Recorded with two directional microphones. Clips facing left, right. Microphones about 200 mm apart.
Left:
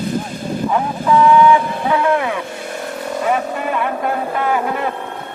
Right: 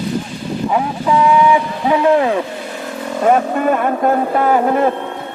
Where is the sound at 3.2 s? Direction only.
45° right (ahead or behind).